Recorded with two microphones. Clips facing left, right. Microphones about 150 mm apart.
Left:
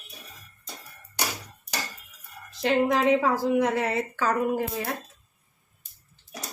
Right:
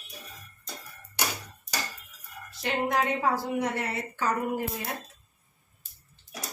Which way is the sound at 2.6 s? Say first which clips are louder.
Left 5 dB; 90° left.